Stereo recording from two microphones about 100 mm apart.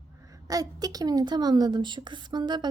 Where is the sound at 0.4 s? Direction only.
40° right (ahead or behind).